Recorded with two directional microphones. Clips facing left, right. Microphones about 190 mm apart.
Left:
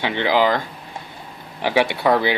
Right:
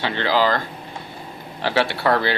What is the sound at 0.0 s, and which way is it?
Speech, 15° left (ahead or behind).